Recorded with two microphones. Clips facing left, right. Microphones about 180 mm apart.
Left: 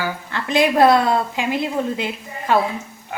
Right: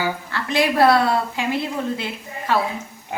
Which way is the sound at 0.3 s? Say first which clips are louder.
Left 5 dB; 20° left (ahead or behind).